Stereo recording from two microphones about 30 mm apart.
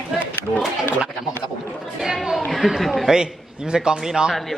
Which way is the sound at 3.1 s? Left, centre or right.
Centre.